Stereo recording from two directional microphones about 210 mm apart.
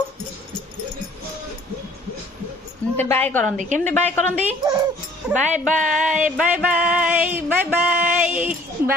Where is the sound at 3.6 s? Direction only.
35° right (ahead or behind).